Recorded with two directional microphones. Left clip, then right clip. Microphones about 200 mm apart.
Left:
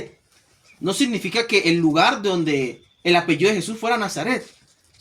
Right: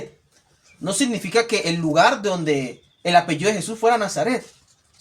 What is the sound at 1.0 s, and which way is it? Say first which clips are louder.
Speech: right 3 dB; 25° right (ahead or behind).